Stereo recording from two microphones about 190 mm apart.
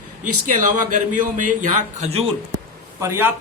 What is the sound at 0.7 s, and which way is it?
Speech, 40° right (ahead or behind).